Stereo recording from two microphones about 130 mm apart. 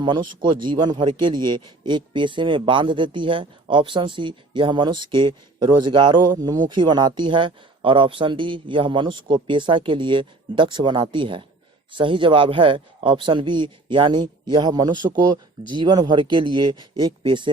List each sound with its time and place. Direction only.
0.0 s a man's voice: 35° right (ahead or behind)